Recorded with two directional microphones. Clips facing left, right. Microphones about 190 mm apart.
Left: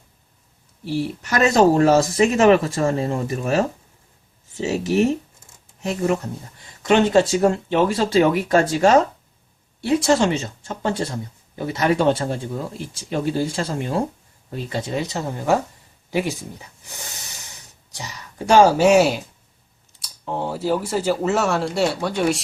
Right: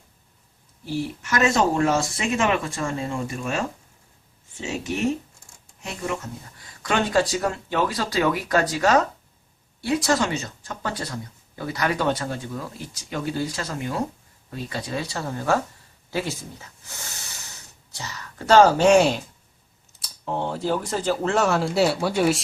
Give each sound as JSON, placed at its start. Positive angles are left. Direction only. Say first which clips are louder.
{"t": 1.2, "sound": "speech", "louder": "left 6 dB", "side_deg": 35}
{"t": 6.8, "sound": "speech", "louder": "left 6 dB", "side_deg": 25}